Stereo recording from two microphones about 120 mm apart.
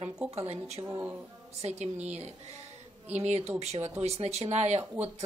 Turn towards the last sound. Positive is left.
turn(degrees=-25)  # may be behind; listen again after turning